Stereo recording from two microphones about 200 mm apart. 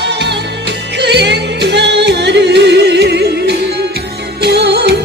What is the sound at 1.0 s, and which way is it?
Music, 60° right (ahead or behind).